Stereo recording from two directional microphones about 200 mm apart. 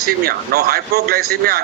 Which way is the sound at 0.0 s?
50° right (ahead or behind).